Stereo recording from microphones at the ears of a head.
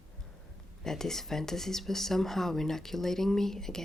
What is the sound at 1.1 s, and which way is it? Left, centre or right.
Speech, centre.